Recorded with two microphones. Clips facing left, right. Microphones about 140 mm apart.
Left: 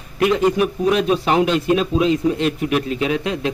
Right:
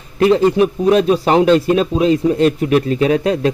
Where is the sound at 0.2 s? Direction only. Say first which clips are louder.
Right 5 dB; 30° right (ahead or behind).